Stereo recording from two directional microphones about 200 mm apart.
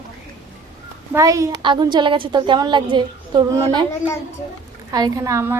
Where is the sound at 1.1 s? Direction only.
15° right (ahead or behind).